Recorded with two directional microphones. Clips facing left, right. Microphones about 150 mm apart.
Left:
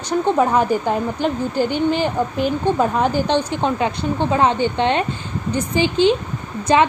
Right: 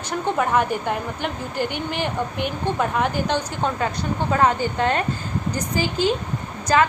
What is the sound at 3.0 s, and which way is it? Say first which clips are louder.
Speech: left 4 dB; 30° left (ahead or behind).